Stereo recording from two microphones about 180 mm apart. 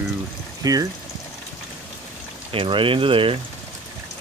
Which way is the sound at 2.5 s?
30° right (ahead or behind).